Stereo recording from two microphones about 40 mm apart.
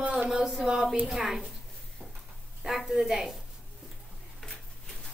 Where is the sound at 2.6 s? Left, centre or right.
Centre.